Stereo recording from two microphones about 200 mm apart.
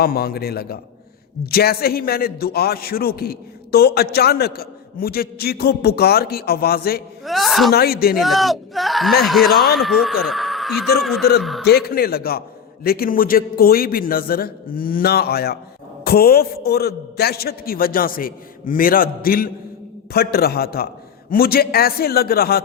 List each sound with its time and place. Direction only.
0.0 s a man's voice: 50° left (ahead or behind)
7.3 s speech: centre (ahead or behind)
7.7 s a man's voice: 50° left (ahead or behind)
8.2 s speech: centre (ahead or behind)
10.2 s a sound: centre (ahead or behind)
11.0 s a man's voice: centre (ahead or behind)
11.6 s a man's voice: 55° left (ahead or behind)